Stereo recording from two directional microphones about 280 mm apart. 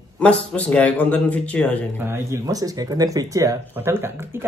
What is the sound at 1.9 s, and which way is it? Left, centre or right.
Speech, centre.